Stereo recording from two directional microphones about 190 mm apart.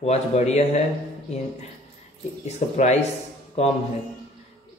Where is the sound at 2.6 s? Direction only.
40° left (ahead or behind).